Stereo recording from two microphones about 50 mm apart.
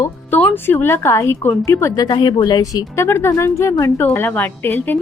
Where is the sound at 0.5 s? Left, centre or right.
Left.